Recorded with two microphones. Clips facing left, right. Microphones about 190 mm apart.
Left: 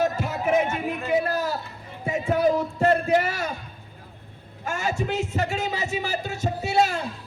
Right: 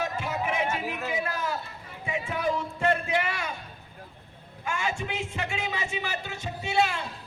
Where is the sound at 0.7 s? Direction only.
5° right (ahead or behind).